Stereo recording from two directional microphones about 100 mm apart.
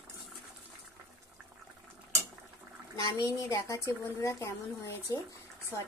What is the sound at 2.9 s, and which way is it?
Speech, 35° left (ahead or behind).